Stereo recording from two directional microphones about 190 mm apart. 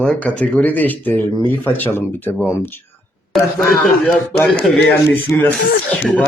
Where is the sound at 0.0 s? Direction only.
5° left (ahead or behind).